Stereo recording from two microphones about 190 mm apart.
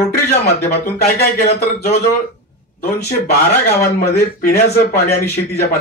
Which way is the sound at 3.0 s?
55° left (ahead or behind).